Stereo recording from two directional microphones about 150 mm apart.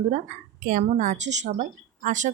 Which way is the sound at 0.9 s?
55° right (ahead or behind).